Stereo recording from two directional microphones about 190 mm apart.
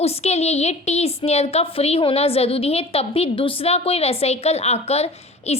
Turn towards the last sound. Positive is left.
turn(degrees=35)  # may be behind; listen again after turning